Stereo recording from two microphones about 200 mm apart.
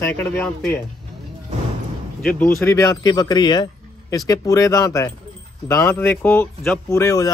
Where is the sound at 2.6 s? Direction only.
15° left (ahead or behind).